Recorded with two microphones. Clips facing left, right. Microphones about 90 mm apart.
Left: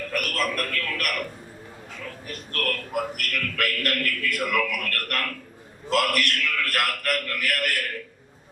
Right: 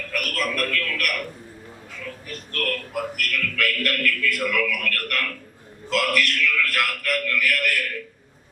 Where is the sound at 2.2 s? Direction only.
45° left (ahead or behind).